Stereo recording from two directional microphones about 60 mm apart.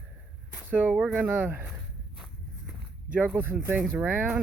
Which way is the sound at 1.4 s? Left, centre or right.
Right.